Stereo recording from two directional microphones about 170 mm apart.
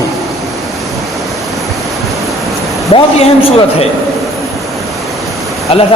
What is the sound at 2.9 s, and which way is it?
Speech, 35° left (ahead or behind).